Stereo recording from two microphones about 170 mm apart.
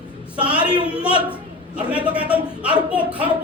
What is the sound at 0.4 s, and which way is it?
A woman's voice, 5° right (ahead or behind).